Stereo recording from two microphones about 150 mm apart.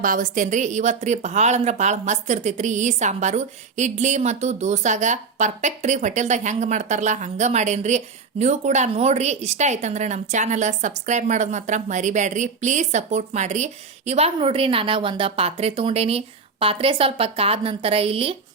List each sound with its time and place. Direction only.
0.0 s a woman's voice: 60° right (ahead or behind); by 18.3 s 40° right (ahead or behind)